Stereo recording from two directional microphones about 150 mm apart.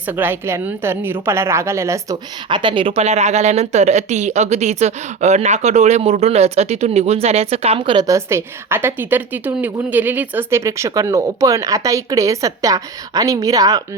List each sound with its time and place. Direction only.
0.0 s a woman's voice: 10° right (ahead or behind)
2.5 s a woman's voice: 35° right (ahead or behind)
8.0 s a woman's voice: 20° right (ahead or behind)